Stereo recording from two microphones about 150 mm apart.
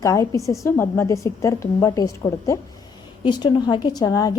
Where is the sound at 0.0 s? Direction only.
20° left (ahead or behind).